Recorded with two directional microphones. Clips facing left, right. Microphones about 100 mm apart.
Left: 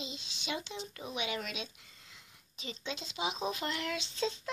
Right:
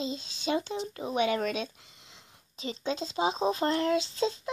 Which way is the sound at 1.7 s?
25° right (ahead or behind).